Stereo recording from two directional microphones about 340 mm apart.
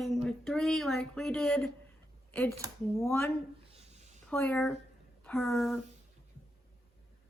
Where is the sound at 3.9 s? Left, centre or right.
Centre.